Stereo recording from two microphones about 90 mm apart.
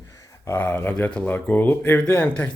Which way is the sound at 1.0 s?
15° left (ahead or behind).